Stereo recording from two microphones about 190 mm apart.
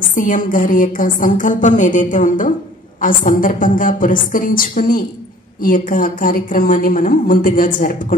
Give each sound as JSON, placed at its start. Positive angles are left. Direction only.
{"t": 0.1, "sound": "a woman's voice", "side_deg": 45}